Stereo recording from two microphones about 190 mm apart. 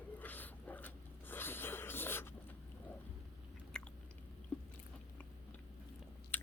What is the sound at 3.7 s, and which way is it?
Biting, 5° left (ahead or behind).